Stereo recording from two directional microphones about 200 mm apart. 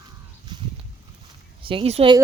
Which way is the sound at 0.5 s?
20° right (ahead or behind).